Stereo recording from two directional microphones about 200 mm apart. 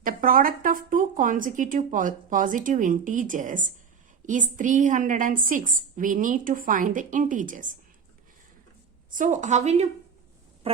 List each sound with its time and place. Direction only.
0.0 s speech: 45° right (ahead or behind)
9.0 s speech: 40° right (ahead or behind)